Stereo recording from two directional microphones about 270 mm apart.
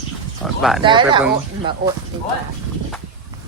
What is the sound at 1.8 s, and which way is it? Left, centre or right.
Speech, right.